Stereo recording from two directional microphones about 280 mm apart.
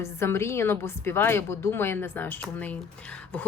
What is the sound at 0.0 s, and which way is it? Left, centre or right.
A woman's voice, centre.